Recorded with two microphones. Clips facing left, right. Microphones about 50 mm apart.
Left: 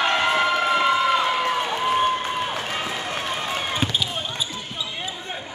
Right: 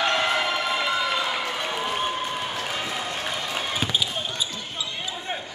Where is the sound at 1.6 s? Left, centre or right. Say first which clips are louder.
Left 6 dB; centre.